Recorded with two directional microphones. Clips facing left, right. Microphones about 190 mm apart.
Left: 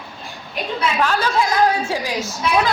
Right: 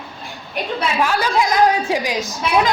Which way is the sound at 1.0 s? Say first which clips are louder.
Right 1 dB; 10° right (ahead or behind).